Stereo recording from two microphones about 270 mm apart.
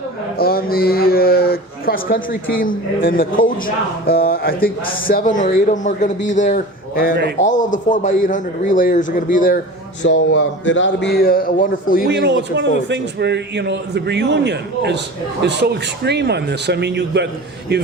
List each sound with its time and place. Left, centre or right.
0.3 s a man's voice: left
10.0 s speech: left
12.1 s a man's voice: right